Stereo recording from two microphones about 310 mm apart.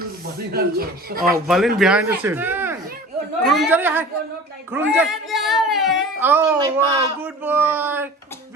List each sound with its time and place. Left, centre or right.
0.5 s speech: right
1.5 s speech: centre